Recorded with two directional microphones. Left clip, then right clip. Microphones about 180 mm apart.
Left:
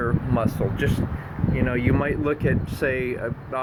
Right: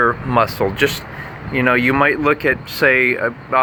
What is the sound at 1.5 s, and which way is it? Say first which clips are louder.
Speech: right 10 dB; 20° right (ahead or behind).